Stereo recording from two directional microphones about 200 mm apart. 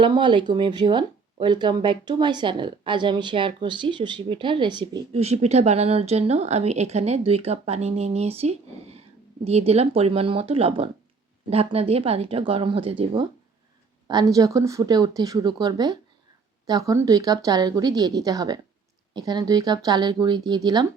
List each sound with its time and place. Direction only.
0.0 s speech: 25° right (ahead or behind)